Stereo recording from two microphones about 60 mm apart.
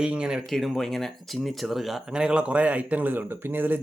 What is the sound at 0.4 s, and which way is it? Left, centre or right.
A man's voice, centre.